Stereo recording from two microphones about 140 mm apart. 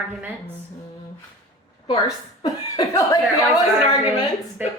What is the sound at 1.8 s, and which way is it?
Speech, 25° left (ahead or behind).